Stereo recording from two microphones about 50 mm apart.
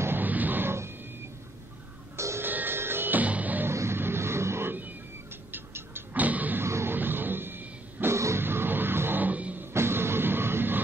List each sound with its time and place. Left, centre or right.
0.2 s a sound: right
0.7 s music: right
2.1 s music: right
2.4 s music: right
3.2 s music: right
3.7 s vehicle: right
5.5 s tick-tock: right
6.1 s a sound: right
6.6 s music: right
7.0 s wild animals: right
8.1 s music: right
8.4 s music: right
9.2 s music: right
9.7 s a sound: right